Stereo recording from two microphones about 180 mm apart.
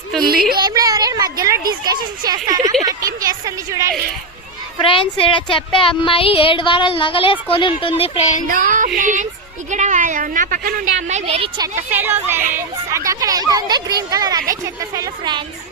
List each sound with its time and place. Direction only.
0.5 s speech: 20° right (ahead or behind)
2.8 s a sound: 20° right (ahead or behind)
4.8 s speech: 30° left (ahead or behind)
8.4 s a woman's voice: 45° right (ahead or behind); by 11.7 s 25° right (ahead or behind)
11.9 s speech: 10° right (ahead or behind)